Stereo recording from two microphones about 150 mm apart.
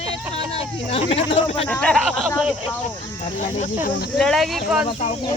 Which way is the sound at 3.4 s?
55° left (ahead or behind).